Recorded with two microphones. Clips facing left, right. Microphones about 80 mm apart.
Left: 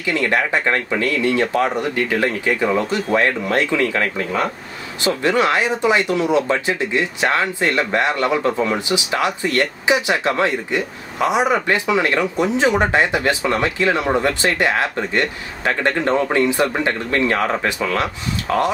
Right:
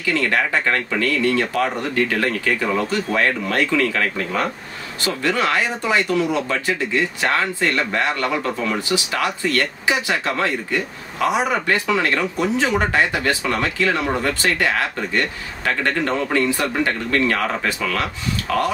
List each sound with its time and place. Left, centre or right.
0.0 s speech: centre